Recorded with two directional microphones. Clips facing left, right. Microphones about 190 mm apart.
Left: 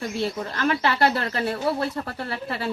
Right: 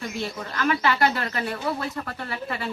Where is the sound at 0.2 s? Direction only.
30° left (ahead or behind).